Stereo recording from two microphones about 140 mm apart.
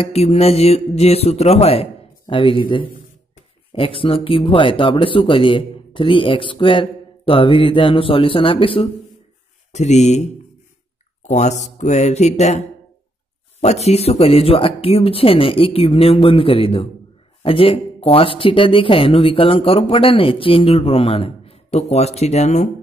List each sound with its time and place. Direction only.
0.0 s speech: 50° left (ahead or behind)
9.7 s speech: 55° left (ahead or behind)